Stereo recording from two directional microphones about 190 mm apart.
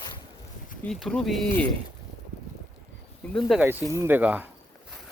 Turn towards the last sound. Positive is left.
turn(degrees=-10)  # may be behind; listen again after turning